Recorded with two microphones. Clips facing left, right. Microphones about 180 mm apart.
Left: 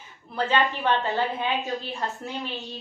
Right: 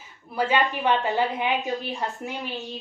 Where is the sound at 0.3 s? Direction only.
10° right (ahead or behind).